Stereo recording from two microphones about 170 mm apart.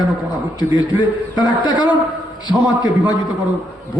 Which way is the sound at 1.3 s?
25° left (ahead or behind).